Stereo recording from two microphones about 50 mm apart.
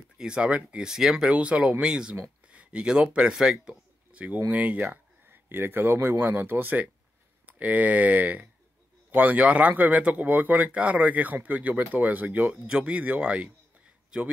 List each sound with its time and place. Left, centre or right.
0.2 s speech: centre
0.8 s speech: centre
4.1 s a sound: right
4.5 s a man's voice: right
5.3 s a man's voice: right
10.7 s a man's voice: right
12.4 s speech: right